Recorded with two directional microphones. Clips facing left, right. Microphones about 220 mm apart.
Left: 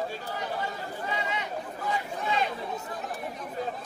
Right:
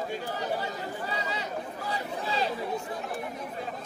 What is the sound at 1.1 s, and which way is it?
Chatter, 35° right (ahead or behind).